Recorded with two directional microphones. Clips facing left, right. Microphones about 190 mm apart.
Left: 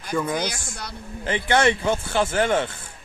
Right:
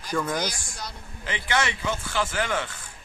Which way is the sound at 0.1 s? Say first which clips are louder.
Left 3 dB; 10° left (ahead or behind).